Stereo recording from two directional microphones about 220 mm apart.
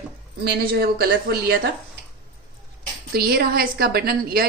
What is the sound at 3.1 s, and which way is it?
A woman's voice, 45° right (ahead or behind).